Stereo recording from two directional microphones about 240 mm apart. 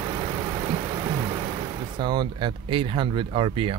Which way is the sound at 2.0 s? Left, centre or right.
Centre.